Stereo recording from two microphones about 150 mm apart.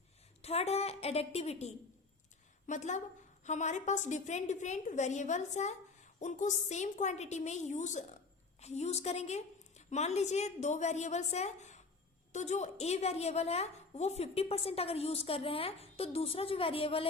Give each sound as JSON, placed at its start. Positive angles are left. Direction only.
{"t": 0.4, "sound": "a woman's voice", "side_deg": 45}